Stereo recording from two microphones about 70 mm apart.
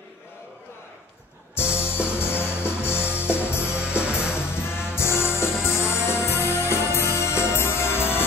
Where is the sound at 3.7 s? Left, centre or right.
Centre.